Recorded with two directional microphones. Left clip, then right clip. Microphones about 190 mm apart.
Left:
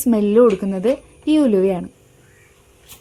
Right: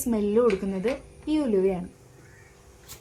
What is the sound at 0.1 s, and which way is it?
A woman's voice, 45° left (ahead or behind).